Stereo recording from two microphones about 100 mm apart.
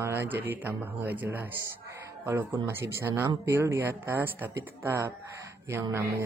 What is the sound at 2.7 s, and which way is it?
Speech, 25° right (ahead or behind).